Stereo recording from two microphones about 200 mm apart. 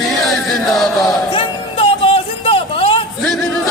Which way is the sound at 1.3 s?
30° left (ahead or behind).